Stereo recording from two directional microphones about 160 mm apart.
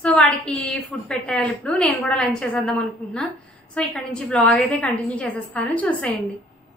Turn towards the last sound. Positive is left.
turn(degrees=10)  # may be behind; listen again after turning